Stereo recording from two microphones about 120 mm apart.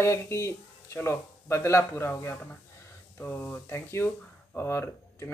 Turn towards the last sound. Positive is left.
turn(degrees=20)  # may be behind; listen again after turning